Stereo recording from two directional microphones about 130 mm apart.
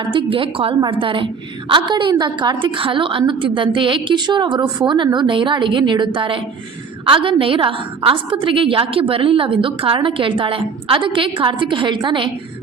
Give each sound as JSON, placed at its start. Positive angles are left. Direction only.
{"t": 0.0, "sound": "a woman's voice", "side_deg": -40}